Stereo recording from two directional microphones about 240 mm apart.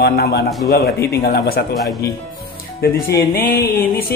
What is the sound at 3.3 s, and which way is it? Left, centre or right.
Speech, left.